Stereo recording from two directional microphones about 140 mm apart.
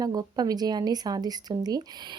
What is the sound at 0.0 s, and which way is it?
Speech, 30° right (ahead or behind).